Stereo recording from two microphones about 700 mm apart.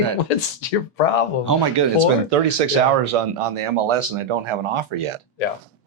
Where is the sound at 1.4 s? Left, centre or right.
Right.